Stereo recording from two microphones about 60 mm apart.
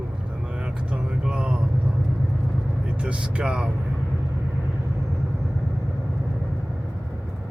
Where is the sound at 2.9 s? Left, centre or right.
Centre.